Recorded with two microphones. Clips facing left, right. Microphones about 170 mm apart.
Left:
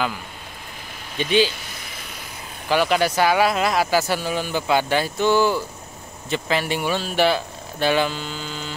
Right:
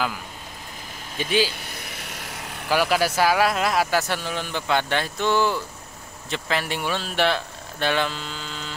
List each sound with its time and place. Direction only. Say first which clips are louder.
1.1 s speech: left 4 dB; 5° right (ahead or behind)
1.9 s vehicle: right 1 dB; 80° right
2.7 s speech: left 2 dB; 5° right (ahead or behind)